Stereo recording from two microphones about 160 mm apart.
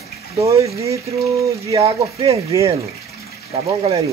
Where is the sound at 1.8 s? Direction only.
40° right (ahead or behind).